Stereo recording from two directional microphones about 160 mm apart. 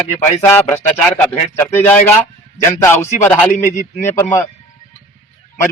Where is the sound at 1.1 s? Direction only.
10° left (ahead or behind).